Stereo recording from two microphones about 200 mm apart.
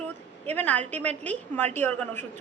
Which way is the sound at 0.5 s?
10° left (ahead or behind).